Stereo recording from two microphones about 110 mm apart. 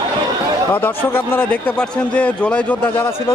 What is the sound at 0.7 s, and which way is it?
A man's voice, 20° left (ahead or behind).